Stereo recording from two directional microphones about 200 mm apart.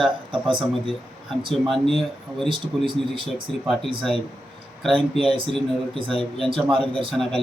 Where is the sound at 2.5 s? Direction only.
25° right (ahead or behind).